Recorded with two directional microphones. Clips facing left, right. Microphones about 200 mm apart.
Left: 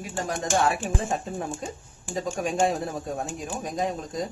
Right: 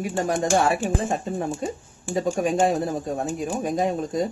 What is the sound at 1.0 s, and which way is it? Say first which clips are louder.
Speech: right 4 dB; centre (ahead or behind).